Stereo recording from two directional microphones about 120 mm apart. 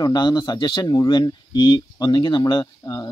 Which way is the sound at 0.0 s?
35° left (ahead or behind).